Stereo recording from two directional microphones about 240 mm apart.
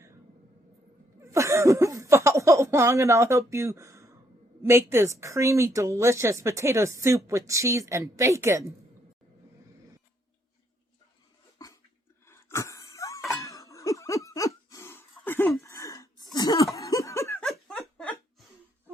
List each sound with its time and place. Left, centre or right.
1.2 s a woman's voice: centre
11.6 s a sound: centre
16.7 s laughter: centre